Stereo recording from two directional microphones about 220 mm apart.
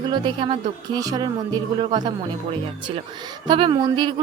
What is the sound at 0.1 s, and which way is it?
A woman's voice, 20° right (ahead or behind).